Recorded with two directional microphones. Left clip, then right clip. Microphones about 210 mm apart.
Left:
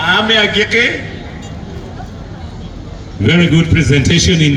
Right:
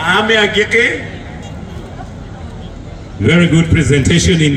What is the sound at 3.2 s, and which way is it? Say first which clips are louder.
A man's voice: even; 40° left (ahead or behind).